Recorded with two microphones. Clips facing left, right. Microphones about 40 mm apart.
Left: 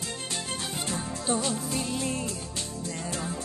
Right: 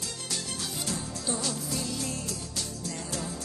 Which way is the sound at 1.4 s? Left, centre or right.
Left.